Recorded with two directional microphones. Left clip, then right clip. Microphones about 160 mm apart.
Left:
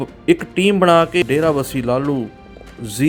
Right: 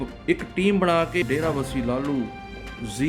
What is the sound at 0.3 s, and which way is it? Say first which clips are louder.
Speech: left 8 dB; 35° left (ahead or behind).